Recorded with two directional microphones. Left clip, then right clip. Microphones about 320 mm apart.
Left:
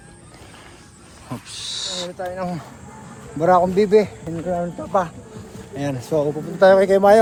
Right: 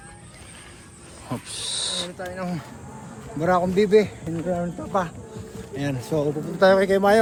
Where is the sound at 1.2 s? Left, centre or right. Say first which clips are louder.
Even; centre.